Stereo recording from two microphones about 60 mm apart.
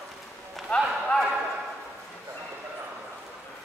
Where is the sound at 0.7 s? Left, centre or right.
Left.